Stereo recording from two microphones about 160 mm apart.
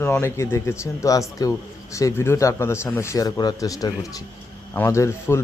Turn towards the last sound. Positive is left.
turn(degrees=15)  # may be behind; listen again after turning